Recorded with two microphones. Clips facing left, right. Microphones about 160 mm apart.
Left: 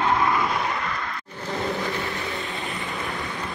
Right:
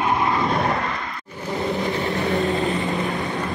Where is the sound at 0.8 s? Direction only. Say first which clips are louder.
Right 2 dB; 25° right (ahead or behind).